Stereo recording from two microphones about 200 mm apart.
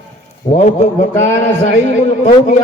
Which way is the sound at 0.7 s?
35° left (ahead or behind).